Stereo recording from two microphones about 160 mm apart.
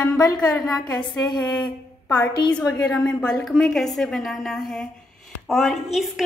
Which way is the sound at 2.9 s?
5° left (ahead or behind).